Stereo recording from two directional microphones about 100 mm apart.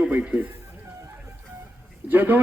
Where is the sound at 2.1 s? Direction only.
20° right (ahead or behind).